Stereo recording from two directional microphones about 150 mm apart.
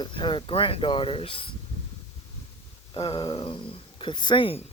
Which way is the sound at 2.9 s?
35° left (ahead or behind).